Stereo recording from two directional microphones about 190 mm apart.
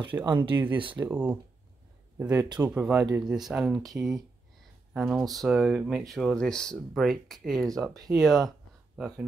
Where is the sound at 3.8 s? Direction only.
20° right (ahead or behind).